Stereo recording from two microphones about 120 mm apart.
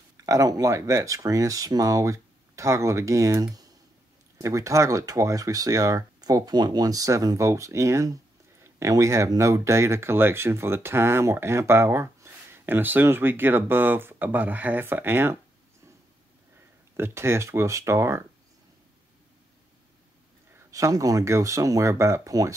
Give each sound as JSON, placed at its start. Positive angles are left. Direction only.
{"t": 0.2, "sound": "speech", "side_deg": -30}
{"t": 16.9, "sound": "speech", "side_deg": -20}
{"t": 20.5, "sound": "speech", "side_deg": -25}